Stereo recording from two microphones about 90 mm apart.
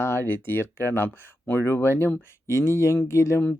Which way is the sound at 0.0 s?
25° left (ahead or behind).